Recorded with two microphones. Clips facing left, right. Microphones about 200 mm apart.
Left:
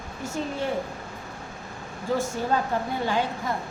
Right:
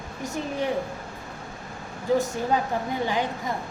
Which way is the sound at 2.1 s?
15° right (ahead or behind).